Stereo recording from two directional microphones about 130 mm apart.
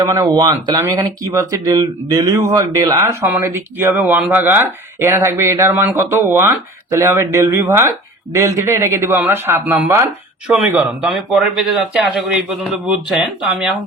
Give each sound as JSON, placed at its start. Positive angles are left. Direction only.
{"t": 0.0, "sound": "speech", "side_deg": -25}
{"t": 10.4, "sound": "a man's voice", "side_deg": -5}